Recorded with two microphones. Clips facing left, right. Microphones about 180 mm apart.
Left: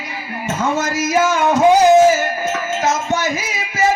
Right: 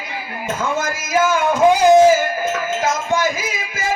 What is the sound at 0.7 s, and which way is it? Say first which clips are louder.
Speech: left 4 dB; 55° right (ahead or behind).